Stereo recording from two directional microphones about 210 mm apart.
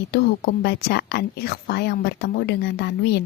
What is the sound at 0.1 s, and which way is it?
Speech, 50° left (ahead or behind).